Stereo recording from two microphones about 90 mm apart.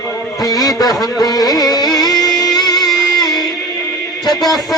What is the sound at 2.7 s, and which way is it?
Music, centre (ahead or behind).